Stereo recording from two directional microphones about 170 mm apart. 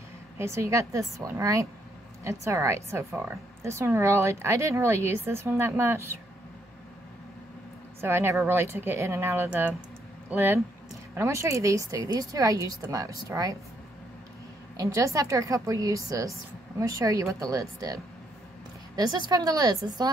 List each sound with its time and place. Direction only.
0.4 s a woman's voice: 15° right (ahead or behind)
8.0 s a woman's voice: 15° right (ahead or behind)
14.8 s a woman's voice: 20° right (ahead or behind)